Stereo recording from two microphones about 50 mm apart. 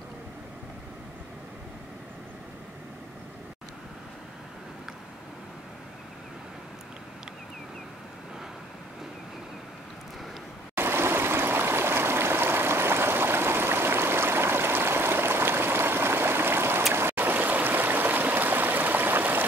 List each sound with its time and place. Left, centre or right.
10.8 s stream: right